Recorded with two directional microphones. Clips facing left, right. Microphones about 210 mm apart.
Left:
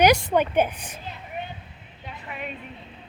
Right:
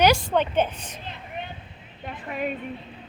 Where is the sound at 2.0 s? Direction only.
45° right (ahead or behind).